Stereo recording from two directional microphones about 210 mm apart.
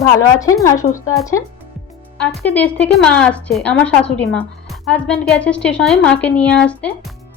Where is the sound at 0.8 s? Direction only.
35° left (ahead or behind).